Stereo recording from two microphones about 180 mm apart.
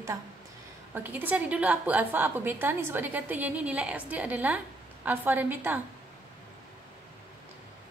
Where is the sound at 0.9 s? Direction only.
10° right (ahead or behind).